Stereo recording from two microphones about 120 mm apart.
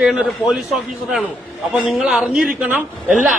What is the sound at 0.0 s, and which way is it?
A man's voice, 5° right (ahead or behind).